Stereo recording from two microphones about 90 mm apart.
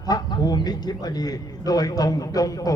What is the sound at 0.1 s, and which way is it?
A man's voice, 50° left (ahead or behind).